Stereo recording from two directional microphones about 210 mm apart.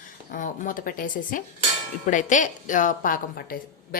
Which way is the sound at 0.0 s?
40° left (ahead or behind).